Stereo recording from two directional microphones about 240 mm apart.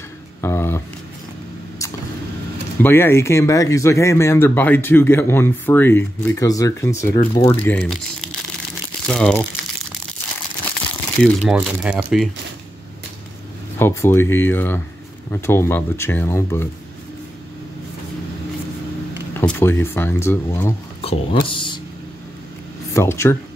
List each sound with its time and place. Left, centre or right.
0.4 s speech: centre
2.8 s speech: centre
11.2 s speech: centre
13.7 s speech: centre
19.3 s speech: centre
21.0 s a sound: left
22.9 s speech: centre